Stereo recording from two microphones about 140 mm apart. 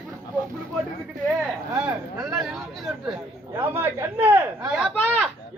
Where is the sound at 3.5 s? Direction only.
15° right (ahead or behind).